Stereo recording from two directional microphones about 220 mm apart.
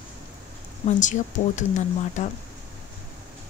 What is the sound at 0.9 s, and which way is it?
Speech, 35° left (ahead or behind).